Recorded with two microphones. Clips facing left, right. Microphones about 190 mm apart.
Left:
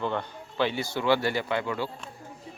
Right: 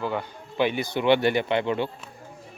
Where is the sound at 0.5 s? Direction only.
15° right (ahead or behind).